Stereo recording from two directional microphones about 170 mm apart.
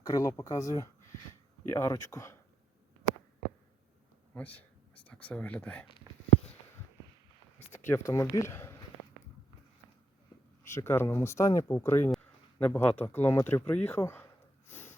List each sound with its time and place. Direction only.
0.0 s speech: 20° left (ahead or behind)
4.4 s speech: 10° left (ahead or behind)
7.7 s speech: 15° left (ahead or behind)
10.6 s speech: 15° left (ahead or behind)
14.7 s snort: 10° left (ahead or behind)